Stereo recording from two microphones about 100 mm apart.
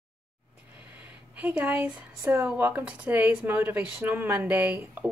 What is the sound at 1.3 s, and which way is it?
Speech, 15° right (ahead or behind).